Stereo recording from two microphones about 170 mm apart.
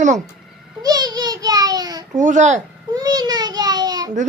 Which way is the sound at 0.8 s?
25° right (ahead or behind).